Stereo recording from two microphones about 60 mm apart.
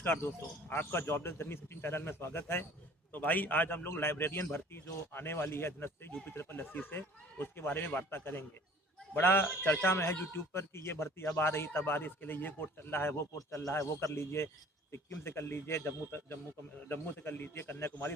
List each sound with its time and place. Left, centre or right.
0.0 s a man's voice: left
3.1 s a man's voice: left
3.8 s a man's voice: left
13.5 s a man's voice: left